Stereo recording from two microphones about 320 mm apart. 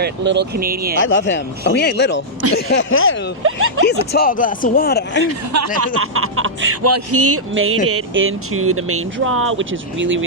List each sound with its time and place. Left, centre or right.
0.0 s speech: right
1.0 s speech: left
3.4 s speech: right
3.8 s speech: left
5.5 s speech: right